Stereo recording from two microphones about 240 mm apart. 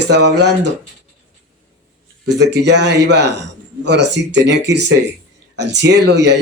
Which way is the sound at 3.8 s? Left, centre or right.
Right.